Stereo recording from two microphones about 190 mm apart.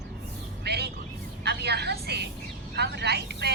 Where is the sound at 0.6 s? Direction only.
60° right (ahead or behind).